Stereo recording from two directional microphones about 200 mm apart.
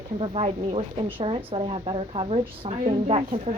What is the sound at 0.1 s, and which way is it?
A woman's voice, 30° right (ahead or behind).